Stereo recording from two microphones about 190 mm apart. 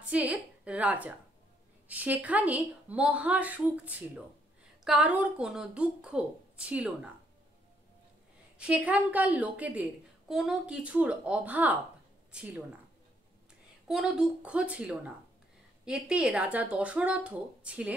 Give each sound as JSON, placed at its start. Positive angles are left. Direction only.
{"t": 0.0, "sound": "a woman's voice", "side_deg": -5}
{"t": 8.5, "sound": "a woman's voice", "side_deg": -5}
{"t": 13.8, "sound": "a woman's voice", "side_deg": 0}